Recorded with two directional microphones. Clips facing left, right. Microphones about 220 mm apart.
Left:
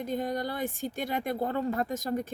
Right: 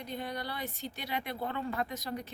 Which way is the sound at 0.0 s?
45° left (ahead or behind).